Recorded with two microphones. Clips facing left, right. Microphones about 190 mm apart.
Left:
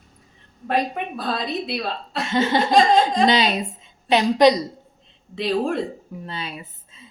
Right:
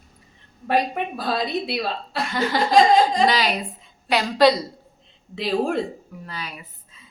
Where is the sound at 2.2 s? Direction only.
25° left (ahead or behind).